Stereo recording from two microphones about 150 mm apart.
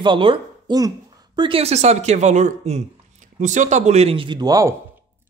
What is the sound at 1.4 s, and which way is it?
Speech, 40° right (ahead or behind).